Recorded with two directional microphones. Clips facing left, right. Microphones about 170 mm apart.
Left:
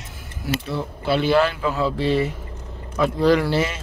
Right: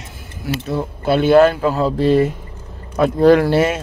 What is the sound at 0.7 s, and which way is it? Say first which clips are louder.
Speech: right 7 dB; 50° right (ahead or behind).